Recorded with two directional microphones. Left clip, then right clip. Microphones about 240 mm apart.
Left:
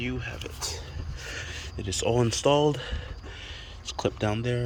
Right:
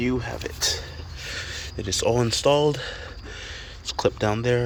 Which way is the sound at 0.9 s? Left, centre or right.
Centre.